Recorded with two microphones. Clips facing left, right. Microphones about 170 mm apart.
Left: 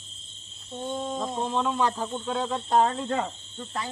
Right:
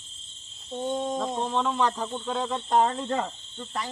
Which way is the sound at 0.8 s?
15° right (ahead or behind).